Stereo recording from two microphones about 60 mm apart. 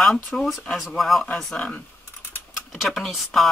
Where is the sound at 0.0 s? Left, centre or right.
Centre.